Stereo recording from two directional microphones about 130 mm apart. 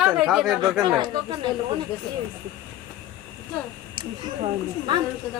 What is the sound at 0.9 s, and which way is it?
Speech, 35° right (ahead or behind).